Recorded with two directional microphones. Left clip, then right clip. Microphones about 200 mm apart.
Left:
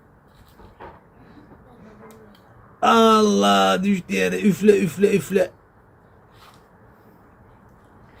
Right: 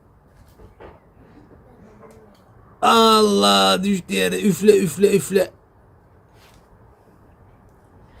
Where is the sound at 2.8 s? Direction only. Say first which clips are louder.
Right 1 dB; 30° right (ahead or behind).